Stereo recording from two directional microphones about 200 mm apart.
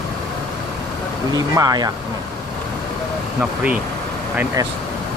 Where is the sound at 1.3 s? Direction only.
20° right (ahead or behind).